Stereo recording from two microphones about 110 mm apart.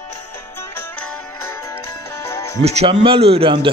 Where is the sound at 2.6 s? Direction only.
70° right (ahead or behind); by 3.7 s 50° right (ahead or behind).